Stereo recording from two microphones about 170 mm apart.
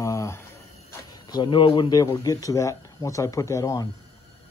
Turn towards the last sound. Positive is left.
turn(degrees=20)  # may be behind; listen again after turning